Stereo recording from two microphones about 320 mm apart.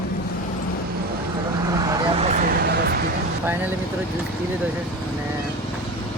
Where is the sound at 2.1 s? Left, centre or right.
Right.